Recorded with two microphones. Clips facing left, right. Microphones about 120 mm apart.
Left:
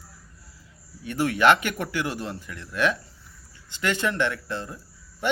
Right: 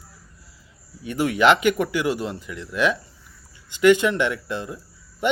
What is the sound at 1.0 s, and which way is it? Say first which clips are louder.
Speech: right 2 dB; 15° right (ahead or behind).